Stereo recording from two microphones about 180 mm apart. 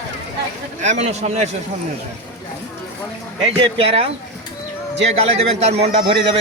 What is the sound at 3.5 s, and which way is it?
Speech, 30° right (ahead or behind).